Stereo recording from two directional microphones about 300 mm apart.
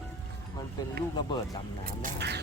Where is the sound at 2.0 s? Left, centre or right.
Right.